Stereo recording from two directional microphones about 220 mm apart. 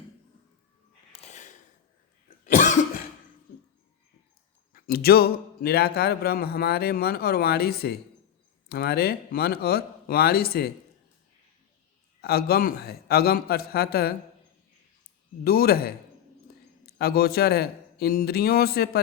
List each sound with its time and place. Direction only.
1.1 s a sound: 30° left (ahead or behind)
2.5 s cough: 35° left (ahead or behind)
4.7 s speech: 45° left (ahead or behind)
12.2 s speech: 45° left (ahead or behind)
15.4 s a man's voice: 45° left (ahead or behind)